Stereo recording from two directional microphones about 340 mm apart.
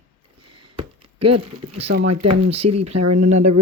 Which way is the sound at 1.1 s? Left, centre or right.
Right.